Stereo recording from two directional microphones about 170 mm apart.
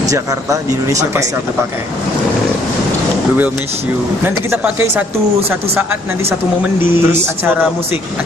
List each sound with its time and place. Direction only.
0.1 s speech: 20° right (ahead or behind)
4.2 s speech: 15° right (ahead or behind)